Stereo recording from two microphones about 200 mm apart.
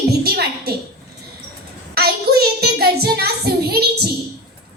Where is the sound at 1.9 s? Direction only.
50° right (ahead or behind).